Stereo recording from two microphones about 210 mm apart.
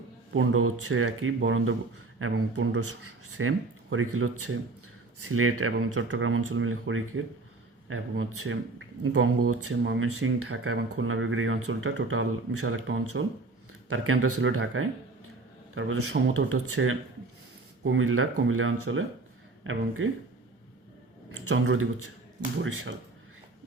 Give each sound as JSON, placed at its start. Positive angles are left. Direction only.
{"t": 0.3, "sound": "speech", "side_deg": -90}
{"t": 2.2, "sound": "a man's voice", "side_deg": -90}
{"t": 3.3, "sound": "speech", "side_deg": -80}
{"t": 9.1, "sound": "speech", "side_deg": -90}
{"t": 18.4, "sound": "speech", "side_deg": -75}
{"t": 21.4, "sound": "a man's voice", "side_deg": -90}
{"t": 22.6, "sound": "speech", "side_deg": -70}